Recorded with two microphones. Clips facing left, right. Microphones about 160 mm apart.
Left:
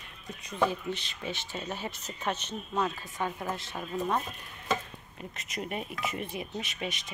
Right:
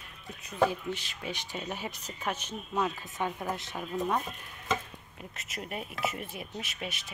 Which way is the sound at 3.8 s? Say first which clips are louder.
Even; centre (ahead or behind).